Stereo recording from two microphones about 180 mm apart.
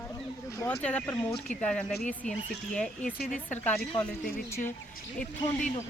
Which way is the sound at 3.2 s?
50° left (ahead or behind).